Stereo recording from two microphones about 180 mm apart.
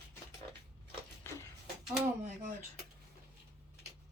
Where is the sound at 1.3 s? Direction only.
15° left (ahead or behind).